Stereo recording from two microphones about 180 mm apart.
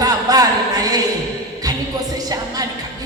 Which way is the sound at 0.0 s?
20° right (ahead or behind).